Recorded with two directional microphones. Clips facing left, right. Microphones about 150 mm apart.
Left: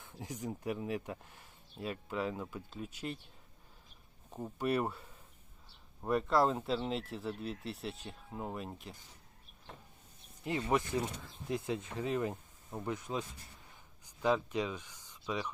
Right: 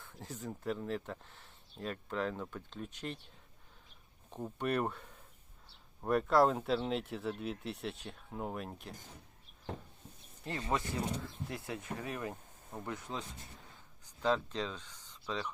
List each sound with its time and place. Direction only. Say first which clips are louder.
0.0 s speech: left 2 dB; 15° left (ahead or behind)
4.3 s speech: left 1 dB; 5° left (ahead or behind)
10.6 s speech: left 2 dB; 20° left (ahead or behind)